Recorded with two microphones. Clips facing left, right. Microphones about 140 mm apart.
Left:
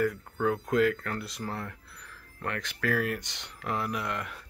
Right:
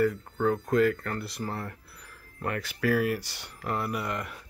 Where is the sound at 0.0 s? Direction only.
Centre (ahead or behind).